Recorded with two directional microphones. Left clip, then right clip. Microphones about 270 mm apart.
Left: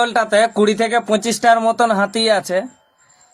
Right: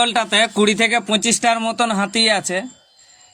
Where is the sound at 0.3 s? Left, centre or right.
Right.